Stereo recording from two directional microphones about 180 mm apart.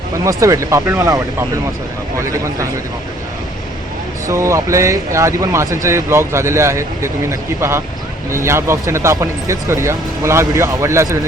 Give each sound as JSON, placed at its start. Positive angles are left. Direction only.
{"t": 0.3, "sound": "speech", "side_deg": -20}
{"t": 4.3, "sound": "speech", "side_deg": -15}